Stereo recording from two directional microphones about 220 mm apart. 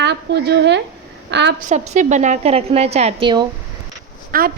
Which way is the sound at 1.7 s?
30° right (ahead or behind).